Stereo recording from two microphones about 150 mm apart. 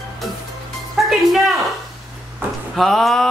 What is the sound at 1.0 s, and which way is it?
Music, centre (ahead or behind).